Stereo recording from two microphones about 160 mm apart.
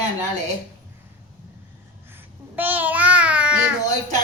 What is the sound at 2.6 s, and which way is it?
A child's voice, 10° right (ahead or behind).